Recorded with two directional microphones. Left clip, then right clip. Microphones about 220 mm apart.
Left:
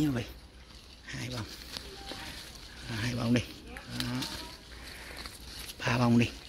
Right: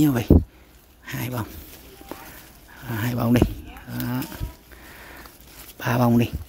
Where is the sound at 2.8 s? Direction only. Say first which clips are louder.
Right 8 dB; 35° right (ahead or behind).